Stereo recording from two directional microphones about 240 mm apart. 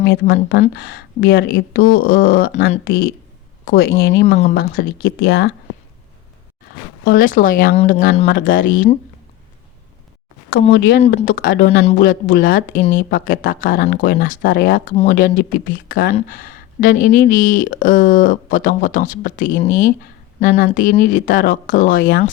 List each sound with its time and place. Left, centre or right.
0.0 s speech: left
4.4 s speech: left
7.0 s speech: left
10.7 s speech: left